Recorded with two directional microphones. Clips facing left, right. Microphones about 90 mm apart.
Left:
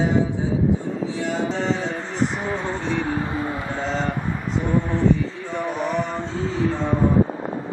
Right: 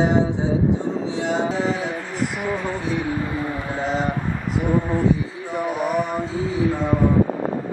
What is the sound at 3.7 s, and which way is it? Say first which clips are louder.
Speech: right 3 dB; 10° right (ahead or behind).